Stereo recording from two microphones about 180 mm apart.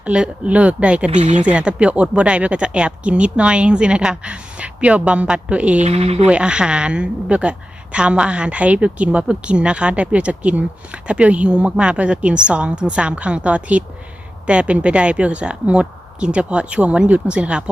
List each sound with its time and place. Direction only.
0.0 s a woman's voice: 5° right (ahead or behind)
1.1 s speech: 40° right (ahead or behind)
1.4 s a woman's voice: 5° right (ahead or behind)
5.8 s speech: 35° right (ahead or behind)
6.2 s a woman's voice: 5° right (ahead or behind)